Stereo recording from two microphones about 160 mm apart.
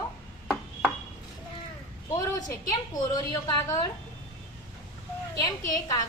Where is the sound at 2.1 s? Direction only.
25° left (ahead or behind).